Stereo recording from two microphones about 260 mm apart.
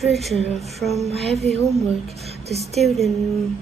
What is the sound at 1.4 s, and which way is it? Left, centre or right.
Speech, right.